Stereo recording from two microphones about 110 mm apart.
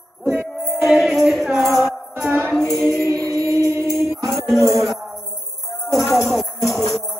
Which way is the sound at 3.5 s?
25° right (ahead or behind).